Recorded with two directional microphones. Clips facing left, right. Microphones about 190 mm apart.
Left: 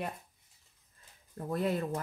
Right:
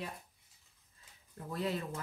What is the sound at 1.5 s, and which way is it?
Speech, 50° left (ahead or behind).